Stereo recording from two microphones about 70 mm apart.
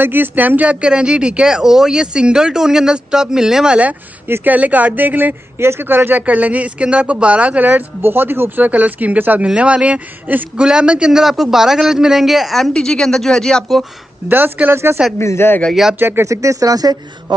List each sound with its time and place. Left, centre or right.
0.0 s speech: right; by 3.7 s centre
4.3 s speech: right; by 12.7 s centre
12.7 s speech: centre
14.3 s speech: right
15.1 s speech: left
15.7 s speech: centre
16.0 s speech: right
16.3 s speech: right